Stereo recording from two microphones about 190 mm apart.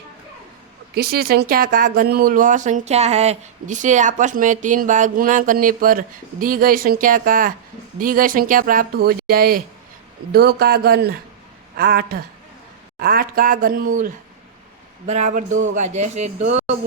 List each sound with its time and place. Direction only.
0.9 s speech: 55° right (ahead or behind); by 16.6 s 35° right (ahead or behind)